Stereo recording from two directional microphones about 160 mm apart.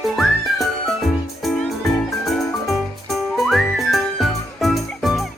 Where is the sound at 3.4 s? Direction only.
Centre (ahead or behind).